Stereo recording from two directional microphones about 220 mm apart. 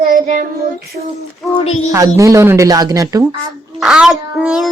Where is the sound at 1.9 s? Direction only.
15° right (ahead or behind).